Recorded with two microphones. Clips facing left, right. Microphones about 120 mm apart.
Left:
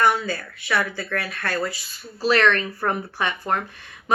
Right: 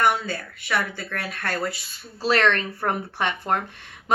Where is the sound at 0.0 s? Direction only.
20° right (ahead or behind).